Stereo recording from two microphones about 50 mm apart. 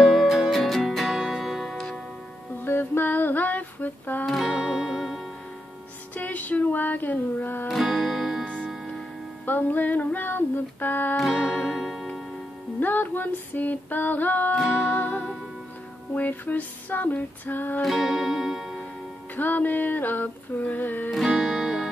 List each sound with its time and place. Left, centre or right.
0.0 s music: centre
2.6 s a sound: left
4.5 s music: centre
6.1 s female singing: left
7.6 s music: centre
9.5 s female singing: left
11.4 s music: left
11.7 s music: centre
12.8 s music: left
16.2 s music: left
17.8 s music: centre
19.3 s music: left
21.4 s music: centre